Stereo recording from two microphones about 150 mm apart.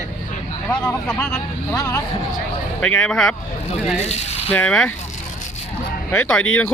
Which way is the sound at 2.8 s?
10° left (ahead or behind).